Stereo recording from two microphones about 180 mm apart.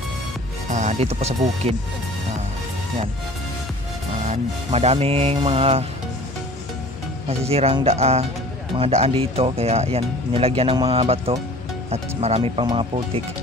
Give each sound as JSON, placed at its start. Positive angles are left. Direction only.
{"t": 0.7, "sound": "speech", "side_deg": -40}
{"t": 4.2, "sound": "speech", "side_deg": -40}
{"t": 7.2, "sound": "speech", "side_deg": -35}